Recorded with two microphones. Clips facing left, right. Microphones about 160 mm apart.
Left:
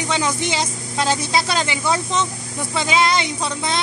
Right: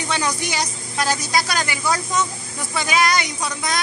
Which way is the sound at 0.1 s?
20° left (ahead or behind).